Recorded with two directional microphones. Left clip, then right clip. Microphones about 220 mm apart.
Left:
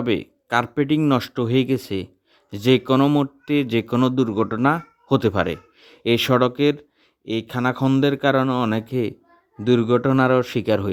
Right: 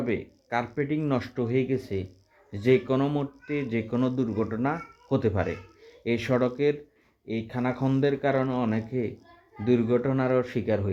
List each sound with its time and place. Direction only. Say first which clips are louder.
0.4 s speech: left 8 dB; 50° left (ahead or behind)